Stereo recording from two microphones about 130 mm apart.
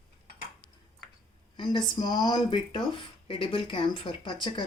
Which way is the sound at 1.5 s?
35° left (ahead or behind).